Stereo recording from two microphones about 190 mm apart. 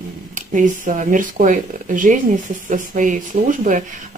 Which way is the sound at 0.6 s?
40° right (ahead or behind).